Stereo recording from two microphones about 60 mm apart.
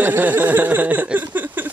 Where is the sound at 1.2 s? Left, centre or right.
Right.